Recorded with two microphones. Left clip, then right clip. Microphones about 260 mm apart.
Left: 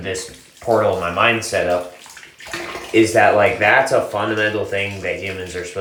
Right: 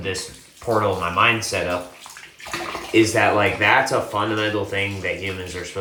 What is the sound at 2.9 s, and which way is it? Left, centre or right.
Speech, right.